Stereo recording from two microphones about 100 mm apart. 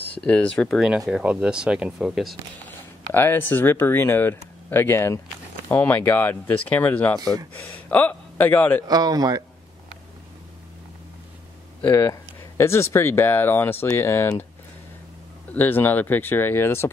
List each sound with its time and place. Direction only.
0.1 s speech: 15° left (ahead or behind)
0.7 s speech: 5° right (ahead or behind)
3.1 s a man's voice: 20° left (ahead or behind)
8.8 s speech: 40° right (ahead or behind)
11.8 s speech: 20° left (ahead or behind)
15.5 s speech: 20° left (ahead or behind)